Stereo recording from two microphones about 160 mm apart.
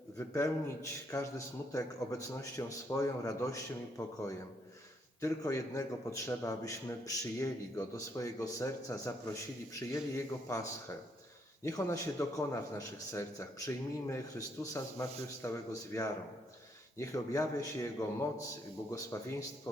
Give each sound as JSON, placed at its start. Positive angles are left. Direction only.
{"t": 0.2, "sound": "speech", "side_deg": 15}
{"t": 5.2, "sound": "speech", "side_deg": 20}